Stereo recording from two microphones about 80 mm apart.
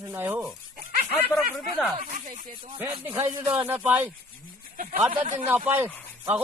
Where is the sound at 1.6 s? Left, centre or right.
Centre.